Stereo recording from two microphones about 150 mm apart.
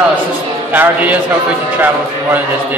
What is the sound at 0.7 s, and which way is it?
Speech, 10° right (ahead or behind).